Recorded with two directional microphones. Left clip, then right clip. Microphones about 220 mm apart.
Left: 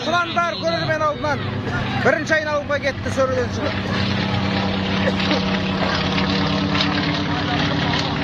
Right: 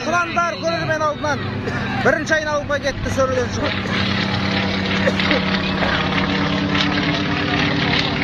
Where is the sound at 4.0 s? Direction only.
15° right (ahead or behind).